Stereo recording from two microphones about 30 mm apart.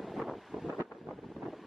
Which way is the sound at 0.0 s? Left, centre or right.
Centre.